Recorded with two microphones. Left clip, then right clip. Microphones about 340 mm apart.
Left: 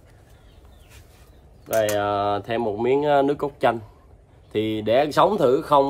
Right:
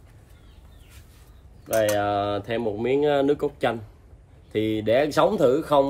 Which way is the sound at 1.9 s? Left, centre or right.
Centre.